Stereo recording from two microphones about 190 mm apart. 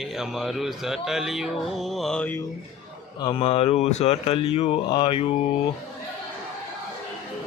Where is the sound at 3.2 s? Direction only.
25° left (ahead or behind).